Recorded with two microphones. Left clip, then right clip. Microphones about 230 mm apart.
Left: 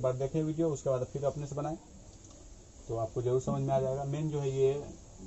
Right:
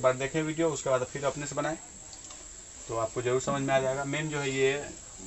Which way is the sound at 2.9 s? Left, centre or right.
Right.